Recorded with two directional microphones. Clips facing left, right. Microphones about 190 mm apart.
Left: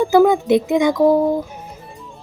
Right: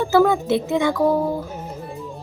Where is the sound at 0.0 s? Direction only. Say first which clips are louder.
Left 4 dB; 15° left (ahead or behind).